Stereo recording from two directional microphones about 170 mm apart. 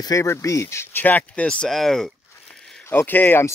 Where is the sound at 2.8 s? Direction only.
10° left (ahead or behind).